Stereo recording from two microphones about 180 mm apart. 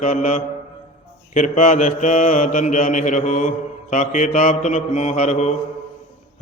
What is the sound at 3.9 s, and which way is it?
A man's voice, 45° left (ahead or behind).